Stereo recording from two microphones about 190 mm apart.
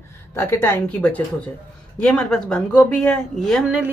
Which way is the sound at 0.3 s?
10° left (ahead or behind).